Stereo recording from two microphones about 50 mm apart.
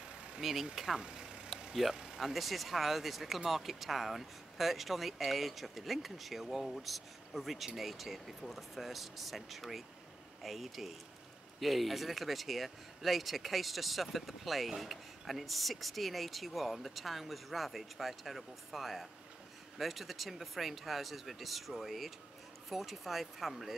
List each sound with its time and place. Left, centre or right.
0.4 s speech: centre
1.0 s vehicle: centre
1.7 s speech: centre